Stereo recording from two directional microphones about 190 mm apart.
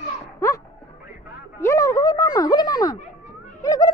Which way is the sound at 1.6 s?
15° left (ahead or behind).